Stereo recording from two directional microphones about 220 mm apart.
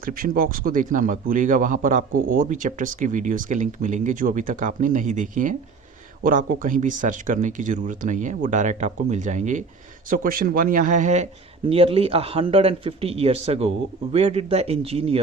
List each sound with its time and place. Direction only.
0.0 s speech: 40° right (ahead or behind)